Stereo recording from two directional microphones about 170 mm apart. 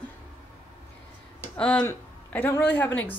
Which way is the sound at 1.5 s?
5° left (ahead or behind).